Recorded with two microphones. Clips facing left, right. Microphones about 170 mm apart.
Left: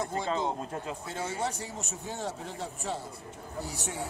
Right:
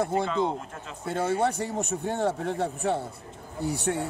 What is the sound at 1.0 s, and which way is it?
A man's voice, 60° right (ahead or behind).